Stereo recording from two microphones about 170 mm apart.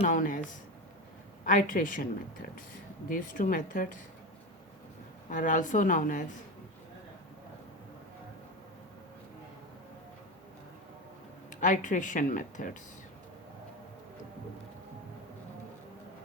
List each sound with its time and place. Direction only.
0.0 s speech: 50° left (ahead or behind)
1.5 s speech: 50° left (ahead or behind)
3.1 s speech: 50° left (ahead or behind)
5.3 s speech: 50° left (ahead or behind)
11.6 s speech: 50° left (ahead or behind)